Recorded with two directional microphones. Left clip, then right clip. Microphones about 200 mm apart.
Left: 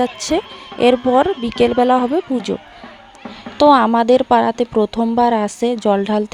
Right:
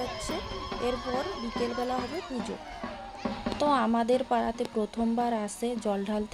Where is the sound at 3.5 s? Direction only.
45° left (ahead or behind).